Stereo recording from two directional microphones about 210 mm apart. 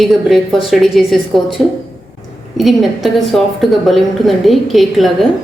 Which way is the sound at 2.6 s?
Centre (ahead or behind).